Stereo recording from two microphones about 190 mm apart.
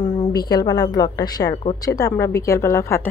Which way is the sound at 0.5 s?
20° left (ahead or behind).